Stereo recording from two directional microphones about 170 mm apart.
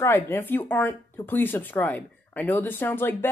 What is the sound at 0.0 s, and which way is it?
Speech, 15° left (ahead or behind).